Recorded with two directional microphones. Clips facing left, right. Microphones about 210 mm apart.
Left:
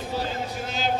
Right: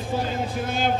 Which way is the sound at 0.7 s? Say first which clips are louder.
Right 3 dB; 55° right (ahead or behind).